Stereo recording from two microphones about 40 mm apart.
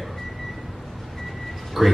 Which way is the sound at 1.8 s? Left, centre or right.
Centre.